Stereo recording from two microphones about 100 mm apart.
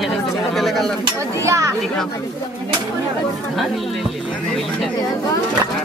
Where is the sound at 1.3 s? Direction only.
30° right (ahead or behind).